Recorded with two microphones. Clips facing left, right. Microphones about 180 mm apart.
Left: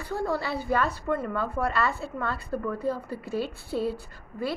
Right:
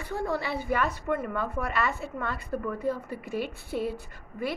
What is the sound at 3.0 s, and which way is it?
Speech, 20° right (ahead or behind).